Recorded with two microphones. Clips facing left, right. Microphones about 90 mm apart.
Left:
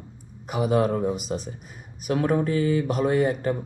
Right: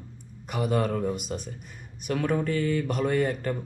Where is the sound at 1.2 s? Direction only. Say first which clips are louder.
Left 4 dB; 5° left (ahead or behind).